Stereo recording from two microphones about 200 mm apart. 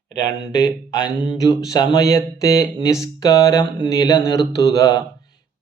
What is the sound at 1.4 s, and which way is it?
Mantra, 15° left (ahead or behind).